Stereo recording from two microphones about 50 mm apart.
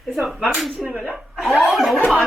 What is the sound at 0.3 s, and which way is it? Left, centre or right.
A woman's voice, centre.